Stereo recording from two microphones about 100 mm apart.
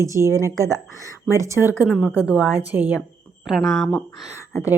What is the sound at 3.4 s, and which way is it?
Speech, centre (ahead or behind).